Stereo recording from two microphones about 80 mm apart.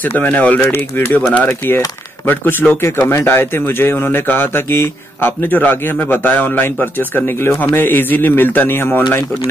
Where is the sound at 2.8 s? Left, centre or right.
Left.